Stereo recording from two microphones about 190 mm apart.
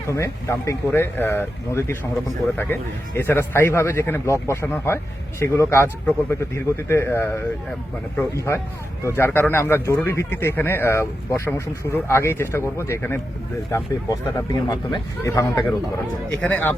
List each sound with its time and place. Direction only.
0.1 s speech: 15° left (ahead or behind)
3.2 s speech: 10° left (ahead or behind)